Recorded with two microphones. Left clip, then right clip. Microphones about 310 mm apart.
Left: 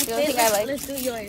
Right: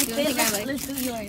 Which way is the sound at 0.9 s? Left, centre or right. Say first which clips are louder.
Left 3 dB; centre.